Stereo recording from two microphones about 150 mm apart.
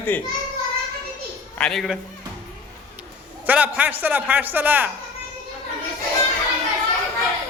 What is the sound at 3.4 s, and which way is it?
A man's voice, 10° right (ahead or behind).